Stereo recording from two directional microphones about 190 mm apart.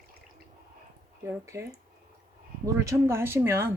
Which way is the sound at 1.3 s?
15° right (ahead or behind).